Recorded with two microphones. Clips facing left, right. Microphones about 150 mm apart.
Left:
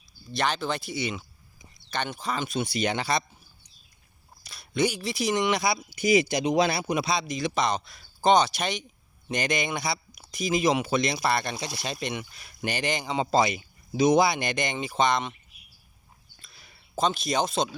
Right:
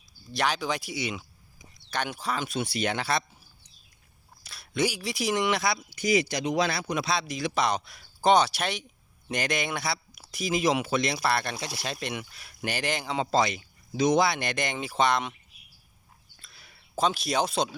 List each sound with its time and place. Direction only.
0.3 s speech: 10° right (ahead or behind)
4.4 s speech: centre (ahead or behind)
16.4 s a sound: centre (ahead or behind)
17.0 s speech: 5° right (ahead or behind)